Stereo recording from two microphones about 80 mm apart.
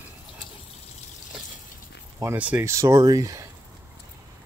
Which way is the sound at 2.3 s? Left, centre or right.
Centre.